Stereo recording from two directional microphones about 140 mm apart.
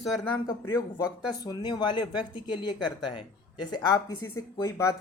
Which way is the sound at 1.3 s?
30° left (ahead or behind).